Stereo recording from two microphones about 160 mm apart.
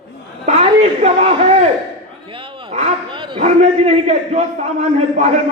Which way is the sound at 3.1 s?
30° right (ahead or behind).